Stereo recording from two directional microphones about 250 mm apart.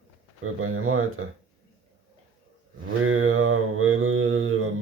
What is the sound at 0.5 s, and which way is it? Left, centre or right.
Mantra, right.